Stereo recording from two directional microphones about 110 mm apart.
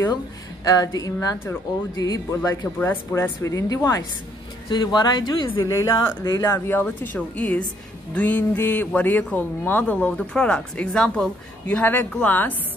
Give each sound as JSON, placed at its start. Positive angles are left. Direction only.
{"t": 0.7, "sound": "speech", "side_deg": 35}
{"t": 2.8, "sound": "speech", "side_deg": 20}
{"t": 4.6, "sound": "speech", "side_deg": 40}
{"t": 6.7, "sound": "a man's voice", "side_deg": 15}